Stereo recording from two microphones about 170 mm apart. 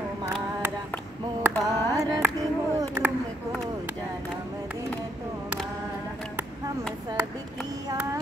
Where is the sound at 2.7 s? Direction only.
20° right (ahead or behind).